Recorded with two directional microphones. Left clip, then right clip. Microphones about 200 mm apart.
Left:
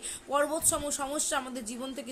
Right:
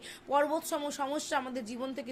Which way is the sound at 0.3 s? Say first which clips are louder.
Left 1 dB; 20° left (ahead or behind).